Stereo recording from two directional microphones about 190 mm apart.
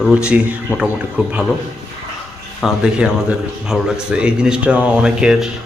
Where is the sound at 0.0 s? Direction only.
5° right (ahead or behind).